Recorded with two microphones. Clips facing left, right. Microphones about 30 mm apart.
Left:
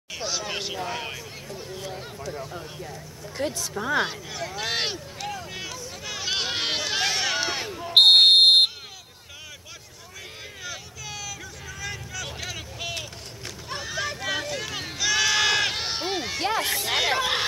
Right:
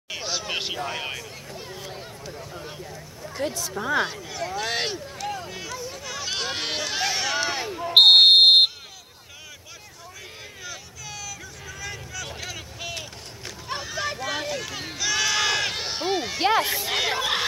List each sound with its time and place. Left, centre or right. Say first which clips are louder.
0.1 s speech: right 1 dB; centre
1.6 s a sound: left 2 dB; centre
2.3 s speech: left 2 dB; centre
5.5 s hubbub: right 1 dB; centre
6.0 s run: left 2 dB; centre
7.7 s fire alarm: right 1 dB; centre
10.6 s vehicle: left 2 dB; centre
13.7 s a sound: right 3 dB; centre
14.0 s run: even; centre
14.5 s sheep: even; centre
16.3 s speech: right 6 dB; centre
16.6 s speech: left 1 dB; centre